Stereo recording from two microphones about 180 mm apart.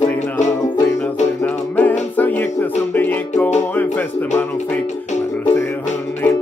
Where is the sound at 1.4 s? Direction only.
10° left (ahead or behind).